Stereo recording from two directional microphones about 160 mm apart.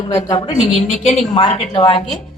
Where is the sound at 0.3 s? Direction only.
30° left (ahead or behind).